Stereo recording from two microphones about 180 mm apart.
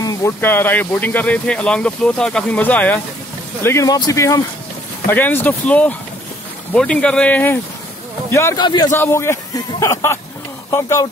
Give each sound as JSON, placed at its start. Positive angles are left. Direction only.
{"t": 0.0, "sound": "speech", "side_deg": 15}
{"t": 8.6, "sound": "speech", "side_deg": 25}
{"t": 8.9, "sound": "speech", "side_deg": 15}